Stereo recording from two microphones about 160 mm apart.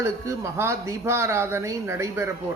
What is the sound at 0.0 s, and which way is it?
Speech, 15° right (ahead or behind).